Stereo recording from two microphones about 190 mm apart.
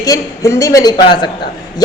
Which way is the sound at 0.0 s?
15° left (ahead or behind).